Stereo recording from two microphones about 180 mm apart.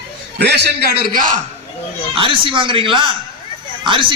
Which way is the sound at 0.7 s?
60° right (ahead or behind).